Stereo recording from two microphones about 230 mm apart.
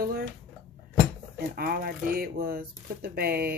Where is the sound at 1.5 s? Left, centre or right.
Right.